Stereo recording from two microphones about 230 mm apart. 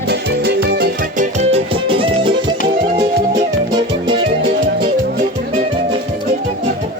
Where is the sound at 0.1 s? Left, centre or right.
Right.